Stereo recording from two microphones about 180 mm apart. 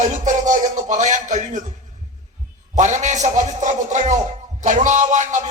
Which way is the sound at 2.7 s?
40° right (ahead or behind).